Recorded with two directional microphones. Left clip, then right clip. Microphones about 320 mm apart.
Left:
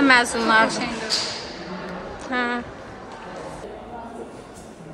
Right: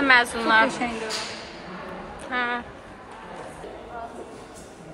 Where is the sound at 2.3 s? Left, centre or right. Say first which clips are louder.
Left 2 dB; centre.